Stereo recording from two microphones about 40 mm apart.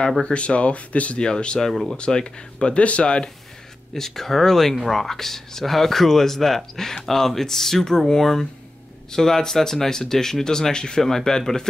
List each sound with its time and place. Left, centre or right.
0.2 s speech: left
1.2 s speech: left
1.7 s speech: centre
2.0 s speech: left
3.9 s speech: centre